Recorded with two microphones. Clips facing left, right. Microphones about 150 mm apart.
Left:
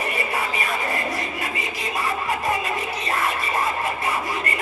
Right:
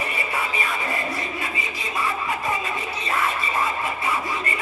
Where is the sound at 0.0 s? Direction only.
40° left (ahead or behind).